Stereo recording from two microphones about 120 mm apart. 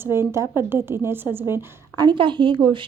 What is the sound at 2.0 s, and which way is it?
Speech, 40° right (ahead or behind).